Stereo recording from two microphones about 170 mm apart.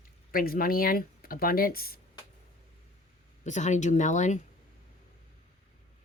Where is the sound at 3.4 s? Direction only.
45° left (ahead or behind).